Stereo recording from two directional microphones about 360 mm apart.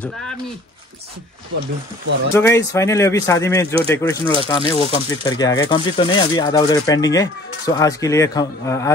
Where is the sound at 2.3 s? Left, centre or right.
Centre.